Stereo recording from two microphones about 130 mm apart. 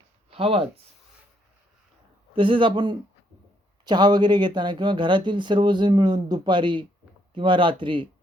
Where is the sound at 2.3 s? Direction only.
40° right (ahead or behind).